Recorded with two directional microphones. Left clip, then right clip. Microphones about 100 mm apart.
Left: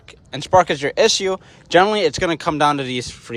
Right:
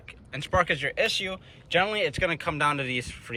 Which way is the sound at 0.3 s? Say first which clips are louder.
Left 10 dB; 55° left (ahead or behind).